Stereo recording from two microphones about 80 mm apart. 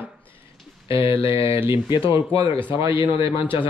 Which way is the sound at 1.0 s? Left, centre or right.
Left.